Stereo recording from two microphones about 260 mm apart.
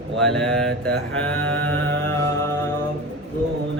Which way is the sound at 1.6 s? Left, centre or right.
Right.